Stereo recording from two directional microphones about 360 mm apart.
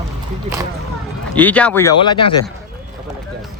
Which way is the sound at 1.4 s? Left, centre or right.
Centre.